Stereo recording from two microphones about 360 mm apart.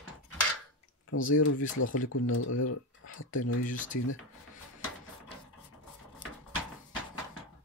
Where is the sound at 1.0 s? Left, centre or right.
Left.